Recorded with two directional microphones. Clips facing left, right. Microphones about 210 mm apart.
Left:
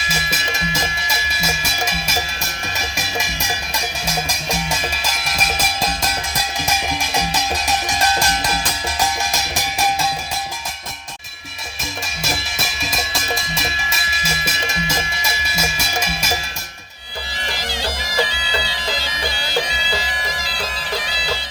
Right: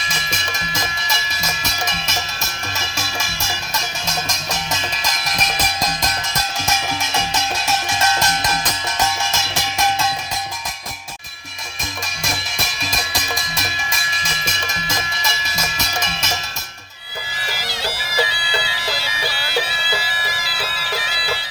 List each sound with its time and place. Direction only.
0.1 s music: 5° left (ahead or behind)
12.8 s music: centre (ahead or behind)
17.8 s bagpipes: 10° right (ahead or behind)